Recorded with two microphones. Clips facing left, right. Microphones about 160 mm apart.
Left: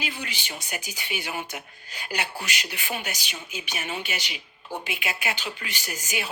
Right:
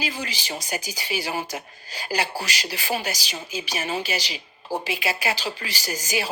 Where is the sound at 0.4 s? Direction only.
35° right (ahead or behind).